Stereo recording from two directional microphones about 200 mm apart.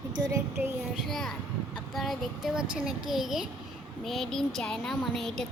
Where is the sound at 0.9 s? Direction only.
Centre (ahead or behind).